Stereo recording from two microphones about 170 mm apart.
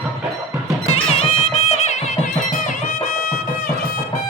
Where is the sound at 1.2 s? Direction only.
40° left (ahead or behind).